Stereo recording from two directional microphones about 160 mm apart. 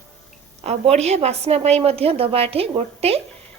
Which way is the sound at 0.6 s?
40° right (ahead or behind).